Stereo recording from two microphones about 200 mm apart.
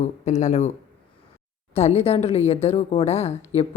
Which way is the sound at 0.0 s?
40° left (ahead or behind).